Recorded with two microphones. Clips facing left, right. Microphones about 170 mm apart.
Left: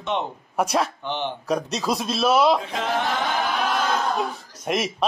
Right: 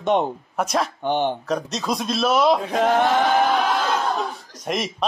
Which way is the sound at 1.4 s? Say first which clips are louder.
Left 1 dB; 10° left (ahead or behind).